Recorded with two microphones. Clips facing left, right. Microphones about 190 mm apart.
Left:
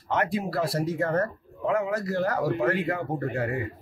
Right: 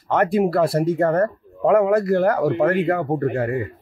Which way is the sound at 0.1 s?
55° right (ahead or behind).